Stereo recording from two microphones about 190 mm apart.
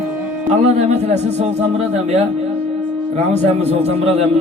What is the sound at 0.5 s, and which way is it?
Music, 35° right (ahead or behind).